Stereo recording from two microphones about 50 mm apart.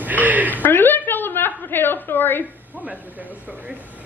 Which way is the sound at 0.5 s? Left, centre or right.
Left.